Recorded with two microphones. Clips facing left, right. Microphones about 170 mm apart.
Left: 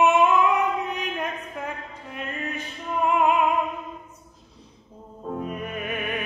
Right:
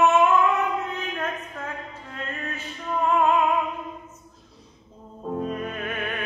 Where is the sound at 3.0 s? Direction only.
15° left (ahead or behind).